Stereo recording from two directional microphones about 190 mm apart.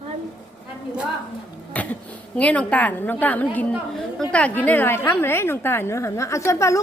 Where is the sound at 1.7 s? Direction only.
5° left (ahead or behind).